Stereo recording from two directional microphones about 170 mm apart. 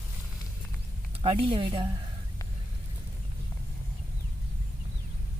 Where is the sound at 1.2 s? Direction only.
30° right (ahead or behind).